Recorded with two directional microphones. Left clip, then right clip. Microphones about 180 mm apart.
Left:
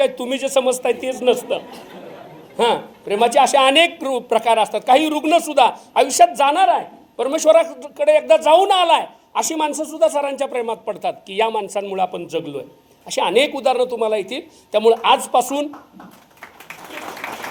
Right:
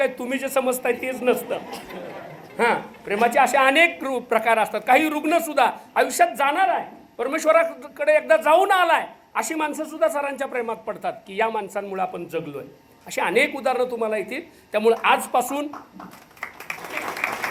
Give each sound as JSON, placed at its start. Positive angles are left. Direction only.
{"t": 0.0, "sound": "a woman's voice", "side_deg": 15}
{"t": 2.6, "sound": "a woman's voice", "side_deg": 20}
{"t": 17.2, "sound": "a sound", "side_deg": -30}